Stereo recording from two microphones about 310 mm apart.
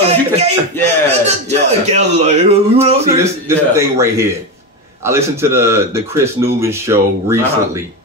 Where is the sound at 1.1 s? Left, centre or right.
Right.